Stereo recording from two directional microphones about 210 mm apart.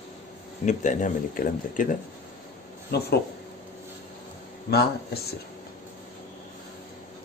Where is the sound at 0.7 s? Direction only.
35° left (ahead or behind).